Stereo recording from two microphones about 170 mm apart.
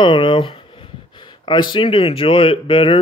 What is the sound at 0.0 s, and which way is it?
Speech, 30° left (ahead or behind).